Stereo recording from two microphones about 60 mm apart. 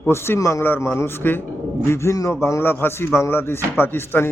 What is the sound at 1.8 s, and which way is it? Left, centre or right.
A man's voice, left.